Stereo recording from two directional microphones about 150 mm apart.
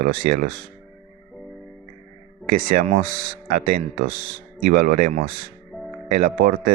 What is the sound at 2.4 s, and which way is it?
Speech, 65° right (ahead or behind).